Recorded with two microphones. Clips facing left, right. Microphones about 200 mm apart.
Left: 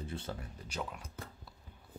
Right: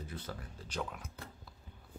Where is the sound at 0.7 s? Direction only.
5° left (ahead or behind).